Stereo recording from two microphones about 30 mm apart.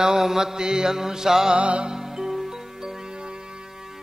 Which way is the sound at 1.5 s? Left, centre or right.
Right.